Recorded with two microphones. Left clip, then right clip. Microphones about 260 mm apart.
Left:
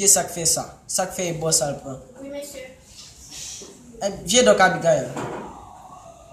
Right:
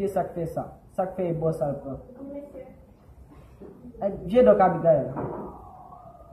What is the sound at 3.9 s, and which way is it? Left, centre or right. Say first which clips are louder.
A man's voice: left 2 dB; centre.